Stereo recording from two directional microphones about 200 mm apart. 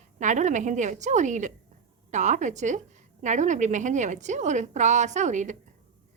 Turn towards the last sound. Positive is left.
turn(degrees=-35)  # may be behind; listen again after turning